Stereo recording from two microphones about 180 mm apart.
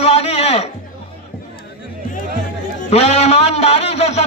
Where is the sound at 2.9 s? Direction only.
35° left (ahead or behind).